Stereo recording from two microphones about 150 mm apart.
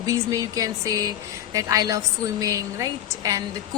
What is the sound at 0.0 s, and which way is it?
A woman's voice, 20° right (ahead or behind).